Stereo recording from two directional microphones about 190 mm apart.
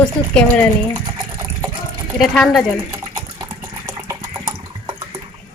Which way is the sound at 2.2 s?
Centre (ahead or behind).